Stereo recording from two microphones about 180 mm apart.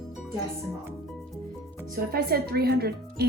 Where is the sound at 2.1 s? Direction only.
55° right (ahead or behind).